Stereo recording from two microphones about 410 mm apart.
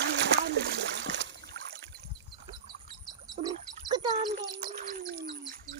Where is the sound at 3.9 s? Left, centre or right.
Centre.